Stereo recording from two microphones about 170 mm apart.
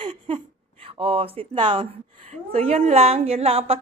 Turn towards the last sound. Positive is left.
turn(degrees=-35)  # may be behind; listen again after turning